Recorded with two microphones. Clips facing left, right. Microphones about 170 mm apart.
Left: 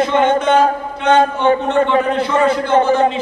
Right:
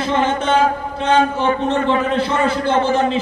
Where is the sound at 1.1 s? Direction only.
35° left (ahead or behind).